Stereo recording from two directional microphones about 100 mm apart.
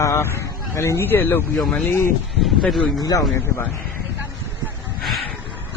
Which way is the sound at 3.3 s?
25° left (ahead or behind).